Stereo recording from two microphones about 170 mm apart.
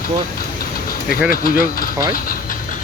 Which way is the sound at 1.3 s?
60° left (ahead or behind).